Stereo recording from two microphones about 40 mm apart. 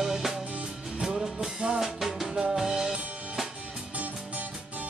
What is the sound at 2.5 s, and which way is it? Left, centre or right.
Music, centre.